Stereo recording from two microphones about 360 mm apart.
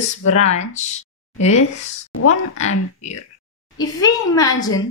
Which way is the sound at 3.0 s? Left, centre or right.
Centre.